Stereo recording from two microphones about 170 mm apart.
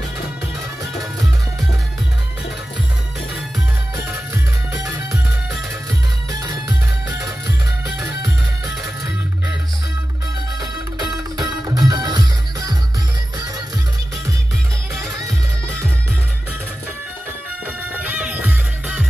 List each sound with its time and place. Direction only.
4.8 s music: 5° right (ahead or behind)
7.2 s music: 10° right (ahead or behind)
11.3 s music: 25° right (ahead or behind)
17.9 s music: 10° right (ahead or behind)